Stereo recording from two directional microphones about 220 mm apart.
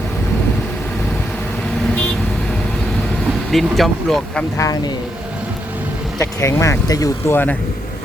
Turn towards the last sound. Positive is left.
turn(degrees=10)  # may be behind; listen again after turning